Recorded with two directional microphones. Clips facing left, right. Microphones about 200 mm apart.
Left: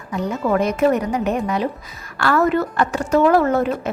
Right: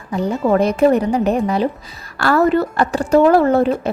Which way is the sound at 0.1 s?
30° right (ahead or behind).